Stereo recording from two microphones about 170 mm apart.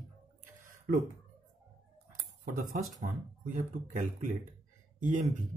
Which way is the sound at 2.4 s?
50° right (ahead or behind).